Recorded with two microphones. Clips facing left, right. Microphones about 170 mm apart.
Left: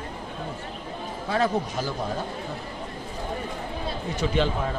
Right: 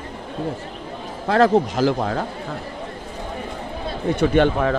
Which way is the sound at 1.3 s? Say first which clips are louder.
Right 9 dB; 90° right.